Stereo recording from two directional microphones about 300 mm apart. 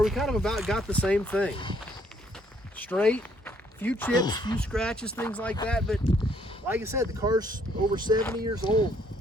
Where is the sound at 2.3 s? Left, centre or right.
Centre.